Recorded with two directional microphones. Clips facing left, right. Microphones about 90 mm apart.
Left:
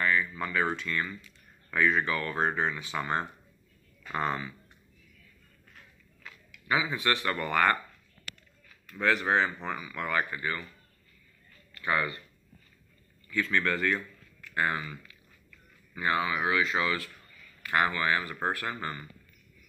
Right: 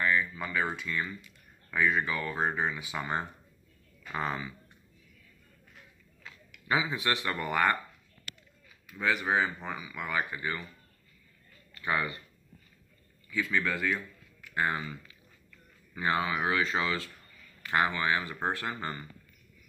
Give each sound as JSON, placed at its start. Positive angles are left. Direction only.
{"t": 0.0, "sound": "speech", "side_deg": -15}
{"t": 4.1, "sound": "speech", "side_deg": 0}
{"t": 6.2, "sound": "speech", "side_deg": -25}
{"t": 8.9, "sound": "speech", "side_deg": -5}
{"t": 11.7, "sound": "a man's voice", "side_deg": -20}
{"t": 13.3, "sound": "speech", "side_deg": -10}
{"t": 14.4, "sound": "speech", "side_deg": -20}